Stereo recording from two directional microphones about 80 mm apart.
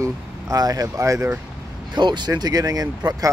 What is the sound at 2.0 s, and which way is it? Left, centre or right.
Speech, right.